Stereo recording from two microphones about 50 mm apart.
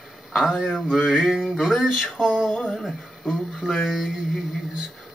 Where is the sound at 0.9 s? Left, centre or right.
Centre.